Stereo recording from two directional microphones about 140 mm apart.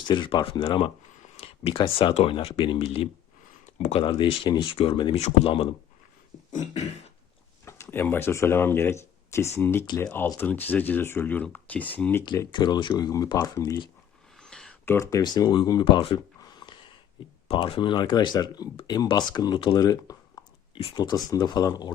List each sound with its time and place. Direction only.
0.1 s speech: 35° left (ahead or behind)
1.2 s a sound: 45° left (ahead or behind)
2.1 s speech: 40° left (ahead or behind)
5.1 s speech: 50° left (ahead or behind)
6.5 s beatboxing: 60° left (ahead or behind)
7.6 s speech: 20° left (ahead or behind)
9.8 s speech: 30° left (ahead or behind)
10.1 s speech: 15° left (ahead or behind)
12.5 s speech: 35° left (ahead or behind)
14.3 s a sound: 5° left (ahead or behind)
14.8 s speech: 20° left (ahead or behind)